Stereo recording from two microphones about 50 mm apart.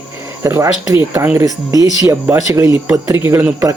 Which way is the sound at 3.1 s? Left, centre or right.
Right.